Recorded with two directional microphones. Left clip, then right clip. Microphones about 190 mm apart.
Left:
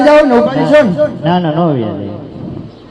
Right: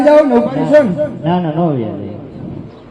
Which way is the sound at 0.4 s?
15° left (ahead or behind).